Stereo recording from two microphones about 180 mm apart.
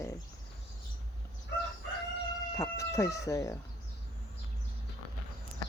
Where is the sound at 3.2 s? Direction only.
20° left (ahead or behind).